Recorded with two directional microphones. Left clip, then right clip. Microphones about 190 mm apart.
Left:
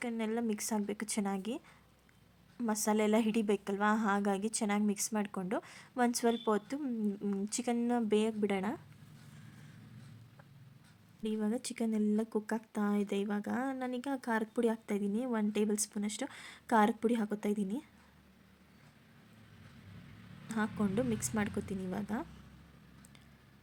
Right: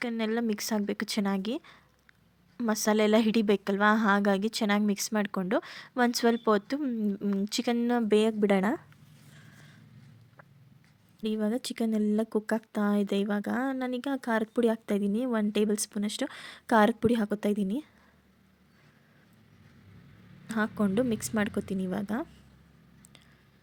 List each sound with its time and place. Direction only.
0.0 s speech: 30° right (ahead or behind)
11.2 s speech: 30° right (ahead or behind)
20.5 s speech: 30° right (ahead or behind)